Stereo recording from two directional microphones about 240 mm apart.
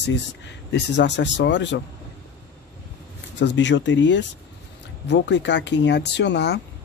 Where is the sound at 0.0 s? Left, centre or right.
Left.